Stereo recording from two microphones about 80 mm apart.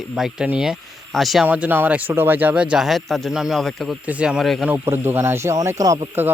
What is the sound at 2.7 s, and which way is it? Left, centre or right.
Speech, centre.